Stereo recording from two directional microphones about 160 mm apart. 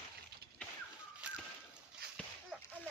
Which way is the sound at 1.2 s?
5° right (ahead or behind).